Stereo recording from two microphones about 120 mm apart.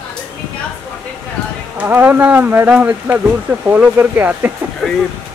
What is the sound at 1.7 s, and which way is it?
Speech, 15° right (ahead or behind).